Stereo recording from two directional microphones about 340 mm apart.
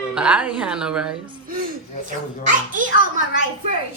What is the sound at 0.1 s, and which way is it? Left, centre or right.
A man's voice, centre.